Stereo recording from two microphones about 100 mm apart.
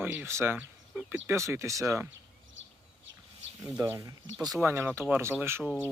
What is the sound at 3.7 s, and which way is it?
Speech, 20° right (ahead or behind).